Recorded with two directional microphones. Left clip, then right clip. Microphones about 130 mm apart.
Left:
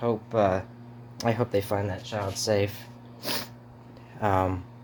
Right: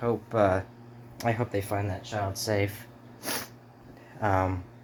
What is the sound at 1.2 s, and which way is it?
Speech, 40° left (ahead or behind).